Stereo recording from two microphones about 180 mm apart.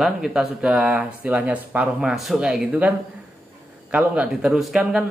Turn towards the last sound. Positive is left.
turn(degrees=-5)  # may be behind; listen again after turning